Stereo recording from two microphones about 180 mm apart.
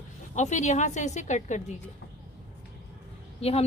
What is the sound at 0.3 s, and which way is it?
A woman's voice, 40° left (ahead or behind).